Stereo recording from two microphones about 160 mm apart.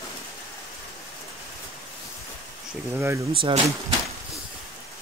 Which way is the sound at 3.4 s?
35° right (ahead or behind).